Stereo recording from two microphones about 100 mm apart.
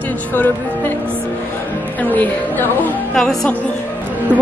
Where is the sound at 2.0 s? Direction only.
15° left (ahead or behind).